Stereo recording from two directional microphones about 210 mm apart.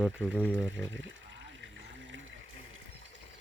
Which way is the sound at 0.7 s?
60° right (ahead or behind).